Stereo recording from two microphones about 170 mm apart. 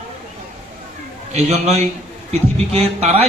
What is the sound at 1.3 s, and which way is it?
A man's voice, 40° right (ahead or behind).